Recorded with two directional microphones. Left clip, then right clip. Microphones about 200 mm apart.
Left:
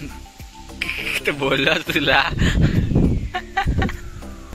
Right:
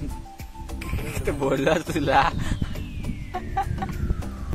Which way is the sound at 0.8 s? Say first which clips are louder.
Left 9 dB; centre (ahead or behind).